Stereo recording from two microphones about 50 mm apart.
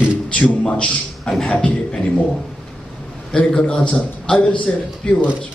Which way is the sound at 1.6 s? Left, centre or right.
Centre.